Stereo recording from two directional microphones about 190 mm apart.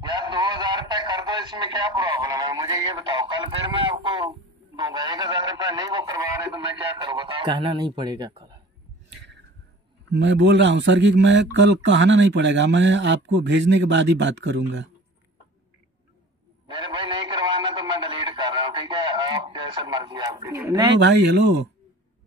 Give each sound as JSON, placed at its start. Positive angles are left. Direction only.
{"t": 0.1, "sound": "a man's voice", "side_deg": -25}
{"t": 10.1, "sound": "speech", "side_deg": -65}
{"t": 16.7, "sound": "a sound", "side_deg": -25}
{"t": 21.0, "sound": "speech", "side_deg": -65}